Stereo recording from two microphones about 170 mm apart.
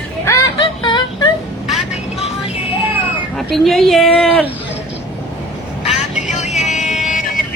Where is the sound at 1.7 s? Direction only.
Centre (ahead or behind).